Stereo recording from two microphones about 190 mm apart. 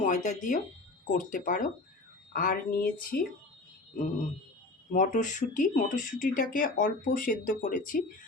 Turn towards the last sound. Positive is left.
turn(degrees=45)  # may be behind; listen again after turning